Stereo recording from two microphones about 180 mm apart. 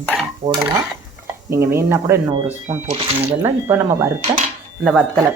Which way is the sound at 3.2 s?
15° right (ahead or behind).